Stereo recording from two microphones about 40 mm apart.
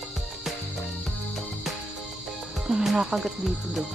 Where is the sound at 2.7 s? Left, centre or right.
Centre.